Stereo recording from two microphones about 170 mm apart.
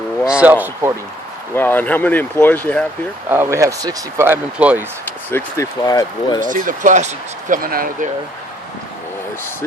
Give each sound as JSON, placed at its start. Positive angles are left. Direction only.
{"t": 0.3, "sound": "speech", "side_deg": -5}
{"t": 1.5, "sound": "speech", "side_deg": 10}
{"t": 3.2, "sound": "speech", "side_deg": -15}
{"t": 5.3, "sound": "speech", "side_deg": 20}
{"t": 6.4, "sound": "speech", "side_deg": -50}